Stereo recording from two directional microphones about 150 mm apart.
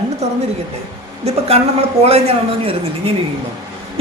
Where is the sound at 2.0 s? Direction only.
45° right (ahead or behind).